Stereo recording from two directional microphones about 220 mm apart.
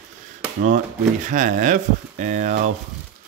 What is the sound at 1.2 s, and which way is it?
Speech, 35° right (ahead or behind).